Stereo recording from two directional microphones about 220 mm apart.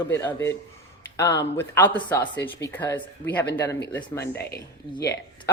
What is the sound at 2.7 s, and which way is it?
Speech, 10° left (ahead or behind).